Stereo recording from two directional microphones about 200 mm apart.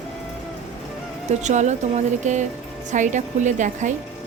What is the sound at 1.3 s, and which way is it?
Speech, 35° right (ahead or behind).